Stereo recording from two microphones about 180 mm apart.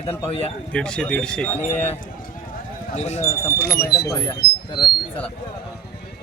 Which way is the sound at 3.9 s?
20° left (ahead or behind).